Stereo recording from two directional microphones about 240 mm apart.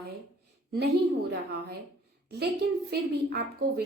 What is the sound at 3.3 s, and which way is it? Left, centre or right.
Speech, right.